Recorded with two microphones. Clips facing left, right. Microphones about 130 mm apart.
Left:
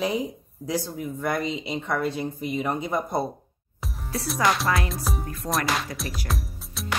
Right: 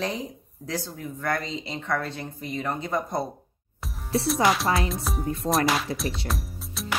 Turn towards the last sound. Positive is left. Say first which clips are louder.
# even
turn(degrees=0)  # may be behind; listen again after turning